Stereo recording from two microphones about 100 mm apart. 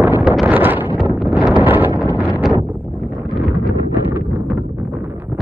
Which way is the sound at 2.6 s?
20° right (ahead or behind).